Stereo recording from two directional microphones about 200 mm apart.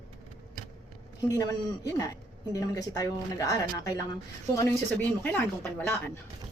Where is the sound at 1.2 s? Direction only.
15° left (ahead or behind).